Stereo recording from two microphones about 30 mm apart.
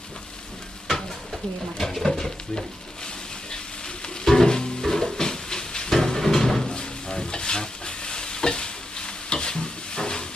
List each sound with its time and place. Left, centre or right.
0.9 s stir: centre
1.8 s a sound: centre
2.1 s stir: centre
4.4 s music: left
5.9 s a sound: centre
6.7 s stir: left